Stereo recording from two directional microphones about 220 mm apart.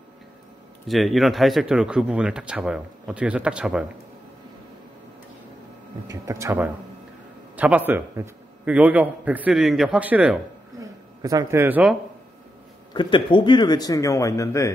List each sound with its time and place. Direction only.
0.8 s speech: centre (ahead or behind)
6.0 s a man's voice: 15° right (ahead or behind)
12.9 s speech: 20° left (ahead or behind)